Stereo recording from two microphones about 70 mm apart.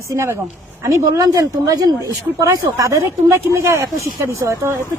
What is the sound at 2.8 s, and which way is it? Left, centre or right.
Speech, right.